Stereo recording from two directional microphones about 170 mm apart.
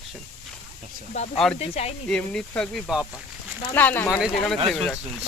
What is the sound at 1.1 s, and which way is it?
Speech, 40° left (ahead or behind).